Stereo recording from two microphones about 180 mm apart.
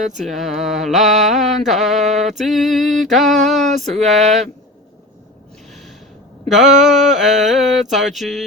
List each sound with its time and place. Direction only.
0.2 s mantra: centre (ahead or behind)
3.9 s speech: 40° right (ahead or behind)
6.5 s mantra: centre (ahead or behind)